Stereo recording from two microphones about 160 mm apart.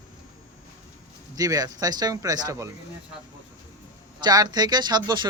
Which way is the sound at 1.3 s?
25° right (ahead or behind).